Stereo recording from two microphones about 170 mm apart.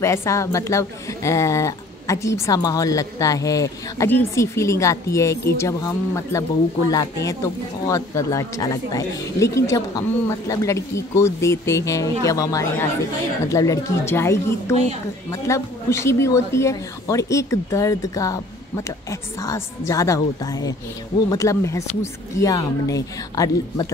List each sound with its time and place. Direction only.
0.0 s a woman's voice: 15° left (ahead or behind)